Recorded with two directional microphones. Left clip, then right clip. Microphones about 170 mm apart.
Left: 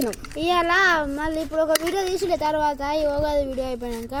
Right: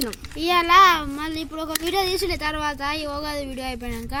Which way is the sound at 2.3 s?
65° right (ahead or behind).